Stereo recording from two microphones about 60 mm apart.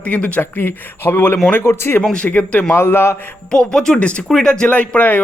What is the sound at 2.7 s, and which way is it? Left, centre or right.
Speech, left.